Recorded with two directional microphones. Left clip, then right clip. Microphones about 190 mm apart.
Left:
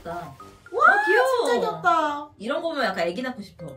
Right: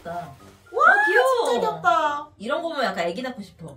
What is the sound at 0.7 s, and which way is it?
Music, 15° right (ahead or behind).